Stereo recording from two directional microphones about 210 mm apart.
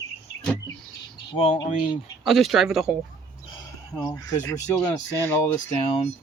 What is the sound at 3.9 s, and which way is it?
Speech, 15° left (ahead or behind).